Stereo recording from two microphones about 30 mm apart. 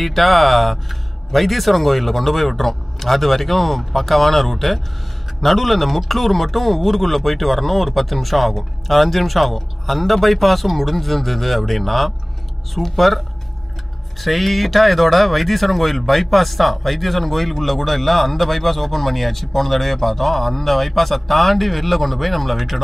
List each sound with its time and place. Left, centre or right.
0.0 s speech: centre
14.2 s speech: centre